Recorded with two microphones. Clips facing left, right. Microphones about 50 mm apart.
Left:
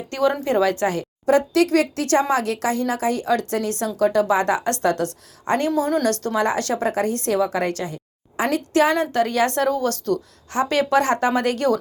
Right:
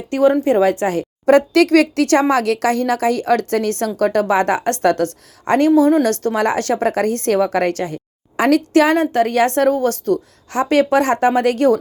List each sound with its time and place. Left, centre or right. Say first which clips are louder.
0.4 s speech: right 4 dB; right
1.2 s a woman's voice: right 5 dB; right